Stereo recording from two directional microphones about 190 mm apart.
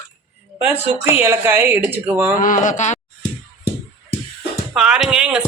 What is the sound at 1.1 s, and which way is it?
Speech, 10° right (ahead or behind).